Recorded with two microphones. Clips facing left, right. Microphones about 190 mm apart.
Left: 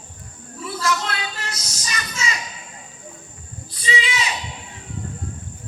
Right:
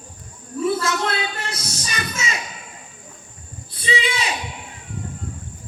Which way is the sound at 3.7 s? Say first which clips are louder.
Right 2 dB; 55° right (ahead or behind).